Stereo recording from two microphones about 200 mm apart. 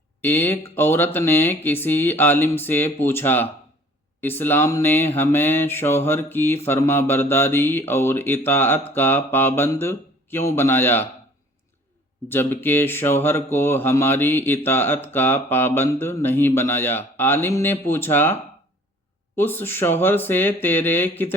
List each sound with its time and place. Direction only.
0.2 s speech: 10° left (ahead or behind)
12.3 s speech: 10° left (ahead or behind)
19.4 s speech: 10° left (ahead or behind)